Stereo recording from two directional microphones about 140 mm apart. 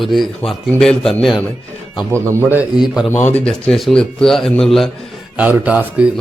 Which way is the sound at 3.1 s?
15° left (ahead or behind).